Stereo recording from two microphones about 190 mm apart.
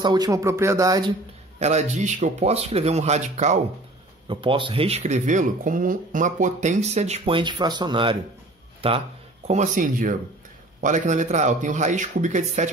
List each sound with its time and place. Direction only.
0.0 s speech: 20° right (ahead or behind)
1.6 s speech: 35° right (ahead or behind)
4.3 s speech: 25° right (ahead or behind)
9.5 s speech: 40° right (ahead or behind)